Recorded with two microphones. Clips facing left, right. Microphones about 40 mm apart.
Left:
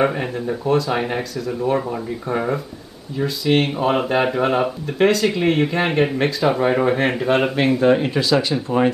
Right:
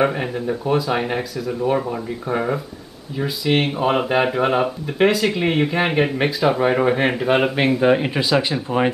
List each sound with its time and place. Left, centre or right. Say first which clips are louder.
0.0 s speech: even; centre